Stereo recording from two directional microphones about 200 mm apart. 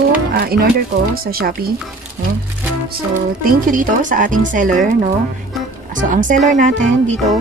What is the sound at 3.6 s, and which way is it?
Speech, 40° right (ahead or behind).